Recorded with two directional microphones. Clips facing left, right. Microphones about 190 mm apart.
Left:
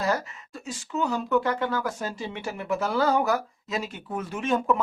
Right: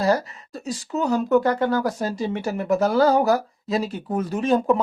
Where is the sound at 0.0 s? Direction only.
35° right (ahead or behind).